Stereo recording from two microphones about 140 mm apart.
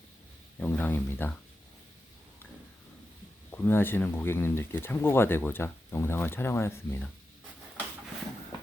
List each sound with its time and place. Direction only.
0.6 s speech: 10° left (ahead or behind)
3.5 s speech: 15° left (ahead or behind)